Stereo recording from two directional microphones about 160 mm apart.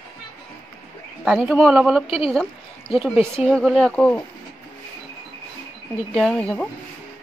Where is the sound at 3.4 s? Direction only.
Centre (ahead or behind).